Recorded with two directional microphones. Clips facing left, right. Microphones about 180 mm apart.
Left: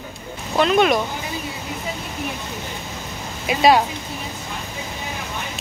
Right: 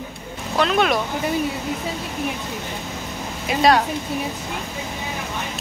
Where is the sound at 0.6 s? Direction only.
Centre (ahead or behind).